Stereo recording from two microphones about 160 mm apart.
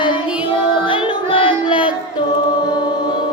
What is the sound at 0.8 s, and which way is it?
Music, 30° left (ahead or behind).